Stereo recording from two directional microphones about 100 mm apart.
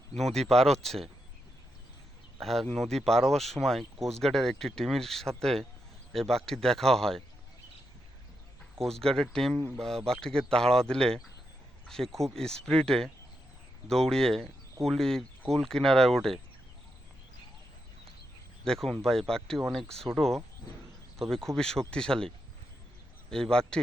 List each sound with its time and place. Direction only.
0.2 s speech: centre (ahead or behind)
2.4 s speech: centre (ahead or behind)
8.8 s speech: 5° left (ahead or behind)
9.6 s speech: 25° right (ahead or behind)
9.8 s speech: 5° left (ahead or behind)
18.6 s speech: 5° left (ahead or behind)
23.3 s speech: 5° left (ahead or behind)